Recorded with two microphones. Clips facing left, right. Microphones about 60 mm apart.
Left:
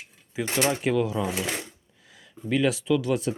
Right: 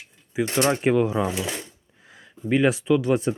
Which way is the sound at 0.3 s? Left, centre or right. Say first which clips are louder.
Right 5 dB; centre.